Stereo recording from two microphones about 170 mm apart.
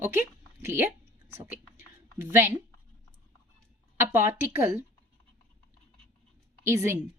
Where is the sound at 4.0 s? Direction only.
15° right (ahead or behind).